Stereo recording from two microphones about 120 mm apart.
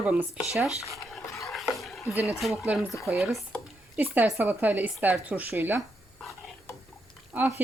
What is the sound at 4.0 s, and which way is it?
Speech, 20° right (ahead or behind).